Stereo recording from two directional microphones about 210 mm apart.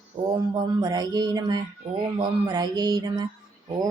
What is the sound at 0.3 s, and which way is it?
Speech, 20° right (ahead or behind).